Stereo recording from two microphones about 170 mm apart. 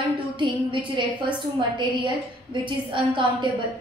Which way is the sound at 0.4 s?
30° right (ahead or behind).